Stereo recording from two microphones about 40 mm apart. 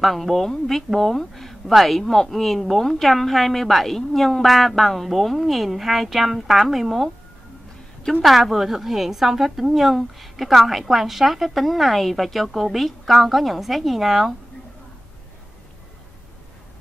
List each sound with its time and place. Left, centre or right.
0.0 s a woman's voice: centre
8.0 s a woman's voice: centre
8.3 s a woman's voice: centre